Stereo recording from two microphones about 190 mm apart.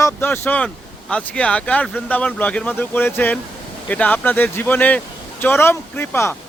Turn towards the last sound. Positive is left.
turn(degrees=15)  # may be behind; listen again after turning